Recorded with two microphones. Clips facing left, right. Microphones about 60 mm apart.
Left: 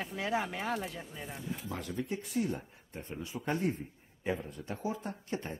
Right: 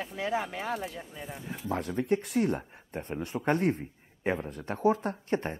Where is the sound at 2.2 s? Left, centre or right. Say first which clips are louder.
Right 6 dB; right.